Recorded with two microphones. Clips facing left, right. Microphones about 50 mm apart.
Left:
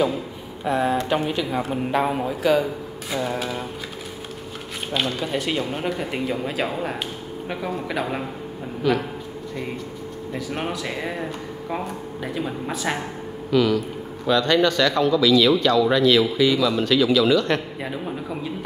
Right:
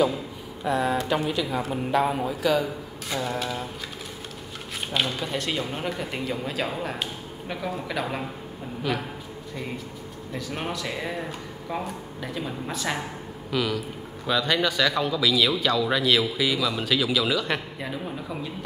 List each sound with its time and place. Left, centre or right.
0.7 s speech: left
1.4 s speech: centre
3.1 s speech: centre
4.9 s speech: centre
8.9 s a man's voice: centre
10.3 s speech: centre
13.5 s a man's voice: centre
17.8 s speech: centre